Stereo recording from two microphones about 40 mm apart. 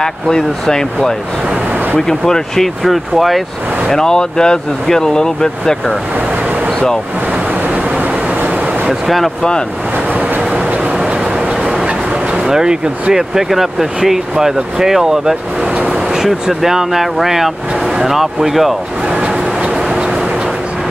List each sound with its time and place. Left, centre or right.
0.0 s speech: centre
3.9 s speech: centre
7.6 s vehicle: right
10.5 s vehicle: right
11.6 s a sound: centre
12.4 s speech: centre
15.9 s vehicle: centre
16.4 s speech: centre
19.0 s vehicle: right